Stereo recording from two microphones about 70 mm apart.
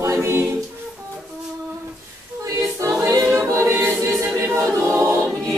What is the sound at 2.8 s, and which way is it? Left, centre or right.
A capella, right.